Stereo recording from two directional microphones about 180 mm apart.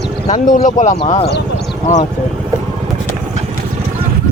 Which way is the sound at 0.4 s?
45° left (ahead or behind).